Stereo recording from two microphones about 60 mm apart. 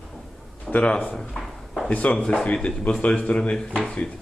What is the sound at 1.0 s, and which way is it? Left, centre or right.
Drawer open or close, centre.